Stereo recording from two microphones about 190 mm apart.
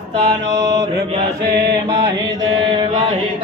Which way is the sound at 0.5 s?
20° right (ahead or behind).